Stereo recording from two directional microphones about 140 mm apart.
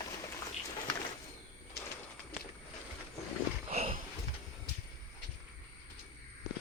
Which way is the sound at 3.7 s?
50° right (ahead or behind).